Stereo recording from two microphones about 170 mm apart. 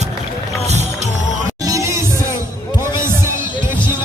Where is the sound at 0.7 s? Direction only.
40° right (ahead or behind).